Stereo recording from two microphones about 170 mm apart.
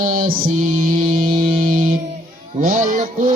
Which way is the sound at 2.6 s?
50° right (ahead or behind).